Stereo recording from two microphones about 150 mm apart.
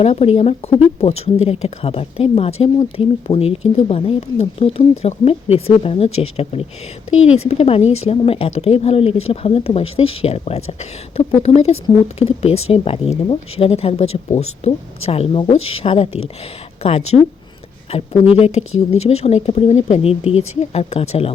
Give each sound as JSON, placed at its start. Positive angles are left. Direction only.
{"t": 0.0, "sound": "speech", "side_deg": 40}